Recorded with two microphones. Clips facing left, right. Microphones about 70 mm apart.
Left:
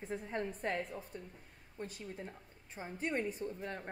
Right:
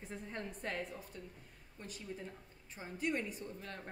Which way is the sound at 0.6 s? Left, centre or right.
Left.